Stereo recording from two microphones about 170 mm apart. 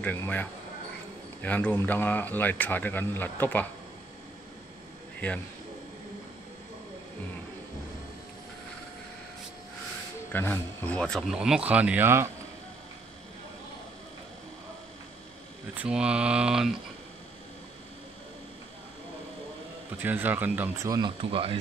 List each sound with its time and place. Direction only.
0.0 s a man's voice: 10° left (ahead or behind)
10.3 s speech: 10° left (ahead or behind); by 12.3 s 15° right (ahead or behind)
15.7 s speech: 5° right (ahead or behind)
20.0 s speech: 10° right (ahead or behind); by 21.5 s 30° right (ahead or behind)